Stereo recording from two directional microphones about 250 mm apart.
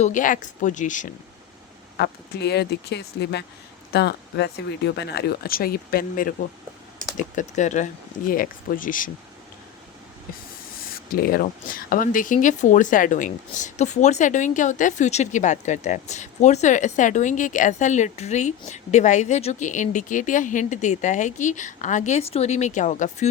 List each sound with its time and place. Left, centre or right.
0.0 s speech: left
2.0 s speech: left
10.8 s speech: left